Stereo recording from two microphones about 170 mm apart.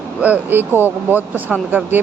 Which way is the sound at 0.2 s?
10° right (ahead or behind).